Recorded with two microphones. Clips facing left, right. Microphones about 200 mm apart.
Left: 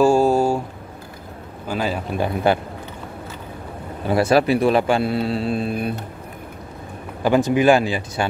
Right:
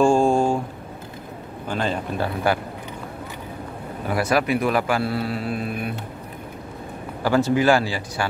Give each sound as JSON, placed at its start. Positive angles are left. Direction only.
{"t": 0.0, "sound": "a sound", "side_deg": 5}
{"t": 1.7, "sound": "speech", "side_deg": 5}
{"t": 2.2, "sound": "speech", "side_deg": 25}
{"t": 4.1, "sound": "speech", "side_deg": 30}
{"t": 7.2, "sound": "speech", "side_deg": 20}